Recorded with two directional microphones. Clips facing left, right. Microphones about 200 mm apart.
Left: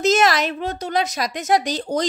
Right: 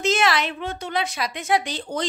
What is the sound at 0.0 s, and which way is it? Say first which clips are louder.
A woman's voice: left 4 dB; 40° left (ahead or behind).